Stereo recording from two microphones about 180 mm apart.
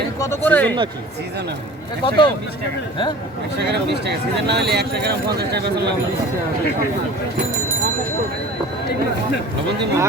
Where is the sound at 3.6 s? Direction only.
70° right (ahead or behind).